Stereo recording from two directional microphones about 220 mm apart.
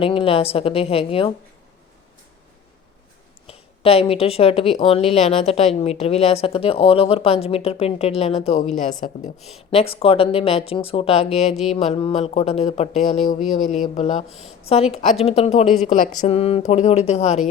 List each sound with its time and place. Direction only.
0.0 s a woman's voice: 25° left (ahead or behind)
3.4 s a woman's voice: 25° left (ahead or behind)
9.4 s speech: centre (ahead or behind)
9.9 s a woman's voice: 25° left (ahead or behind)
14.3 s speech: centre (ahead or behind)
14.7 s a woman's voice: 25° left (ahead or behind)